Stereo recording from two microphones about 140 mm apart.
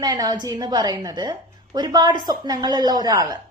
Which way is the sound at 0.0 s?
30° right (ahead or behind).